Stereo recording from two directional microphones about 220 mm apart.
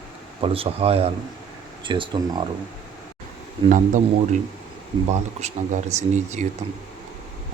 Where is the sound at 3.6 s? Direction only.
35° right (ahead or behind).